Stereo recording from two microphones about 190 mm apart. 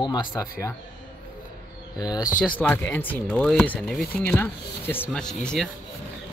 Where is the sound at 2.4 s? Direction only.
10° left (ahead or behind).